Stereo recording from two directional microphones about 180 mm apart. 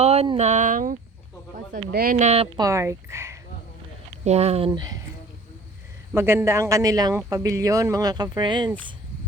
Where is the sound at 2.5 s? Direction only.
20° right (ahead or behind).